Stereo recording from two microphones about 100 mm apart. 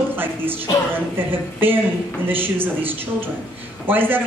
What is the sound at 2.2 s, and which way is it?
A woman's voice, 20° right (ahead or behind).